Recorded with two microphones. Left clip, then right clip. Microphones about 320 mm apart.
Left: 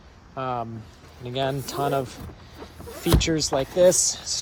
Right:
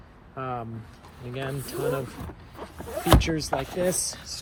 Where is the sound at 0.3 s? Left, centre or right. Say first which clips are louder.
Left 4 dB; centre.